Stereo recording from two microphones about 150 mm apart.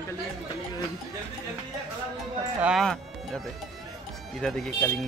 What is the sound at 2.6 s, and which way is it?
Speech, 5° right (ahead or behind).